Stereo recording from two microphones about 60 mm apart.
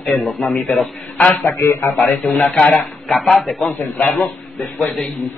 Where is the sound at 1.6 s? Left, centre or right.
Left.